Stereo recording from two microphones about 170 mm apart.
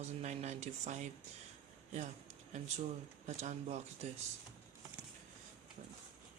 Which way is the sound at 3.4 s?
45° right (ahead or behind).